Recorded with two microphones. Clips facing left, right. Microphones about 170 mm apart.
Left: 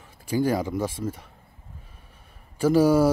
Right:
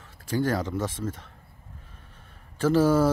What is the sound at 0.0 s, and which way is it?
Speech, 15° left (ahead or behind).